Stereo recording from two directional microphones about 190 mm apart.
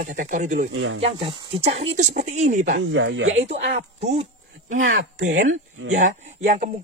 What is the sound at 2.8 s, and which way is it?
Speech, 80° right.